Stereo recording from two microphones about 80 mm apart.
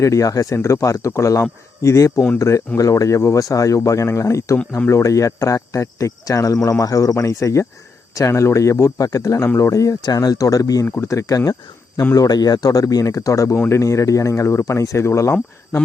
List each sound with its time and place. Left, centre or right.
0.0 s speech: left
10.0 s speech: left
10.8 s speech: left
11.1 s speech: left